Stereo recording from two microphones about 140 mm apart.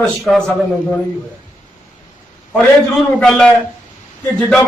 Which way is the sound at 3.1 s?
5° left (ahead or behind).